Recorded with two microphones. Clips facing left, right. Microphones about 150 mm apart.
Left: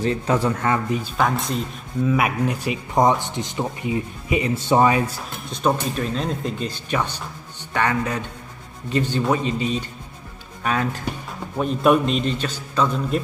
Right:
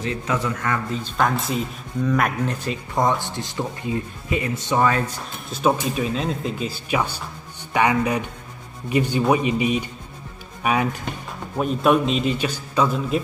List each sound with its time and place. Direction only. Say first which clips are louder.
0.0 s a man's voice: left 4 dB; 35° left (ahead or behind)
0.8 s speech: left 3 dB; 15° left (ahead or behind)
1.1 s speech: right 2 dB; centre (ahead or behind)
5.5 s a man's voice: right 1 dB; 5° right (ahead or behind)
11.5 s a man's voice: left 1 dB; 5° right (ahead or behind)